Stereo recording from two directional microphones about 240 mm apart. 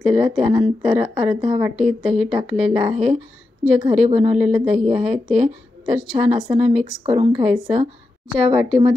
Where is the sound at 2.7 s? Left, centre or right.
Right.